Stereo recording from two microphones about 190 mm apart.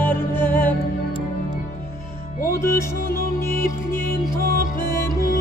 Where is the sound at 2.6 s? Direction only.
15° left (ahead or behind).